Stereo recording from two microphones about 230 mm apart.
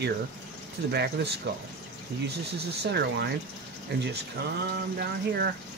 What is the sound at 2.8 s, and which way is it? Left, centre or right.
Speech, right.